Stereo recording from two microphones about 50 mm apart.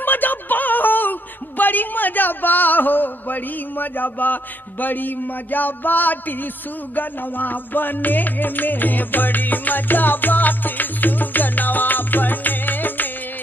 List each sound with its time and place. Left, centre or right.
0.0 s music: left
1.6 s a man's voice: left
7.0 s music: left